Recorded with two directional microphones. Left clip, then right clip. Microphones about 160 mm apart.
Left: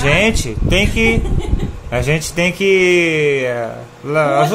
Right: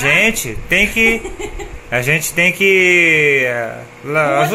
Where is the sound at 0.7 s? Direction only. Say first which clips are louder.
Right 2 dB; 15° left (ahead or behind).